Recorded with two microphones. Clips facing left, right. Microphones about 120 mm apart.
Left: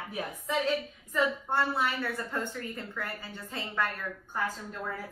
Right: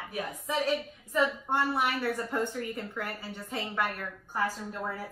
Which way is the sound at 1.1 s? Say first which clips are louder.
Right 1 dB; 15° right (ahead or behind).